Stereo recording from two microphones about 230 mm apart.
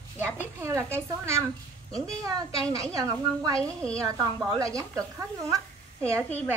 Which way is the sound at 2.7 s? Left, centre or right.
Centre.